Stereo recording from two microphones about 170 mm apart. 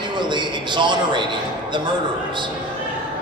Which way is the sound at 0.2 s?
25° right (ahead or behind).